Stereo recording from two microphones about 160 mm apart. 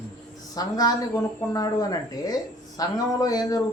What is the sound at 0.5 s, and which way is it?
Speech, 25° left (ahead or behind).